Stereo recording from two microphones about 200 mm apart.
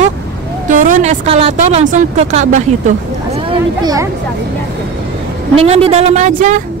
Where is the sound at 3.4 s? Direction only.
20° right (ahead or behind).